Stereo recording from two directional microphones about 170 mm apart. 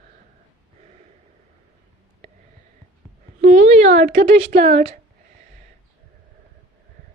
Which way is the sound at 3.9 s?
70° right (ahead or behind).